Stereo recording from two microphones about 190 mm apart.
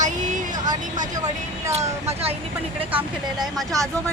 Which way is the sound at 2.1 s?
35° right (ahead or behind).